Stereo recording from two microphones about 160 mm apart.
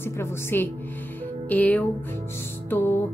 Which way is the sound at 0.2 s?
15° left (ahead or behind).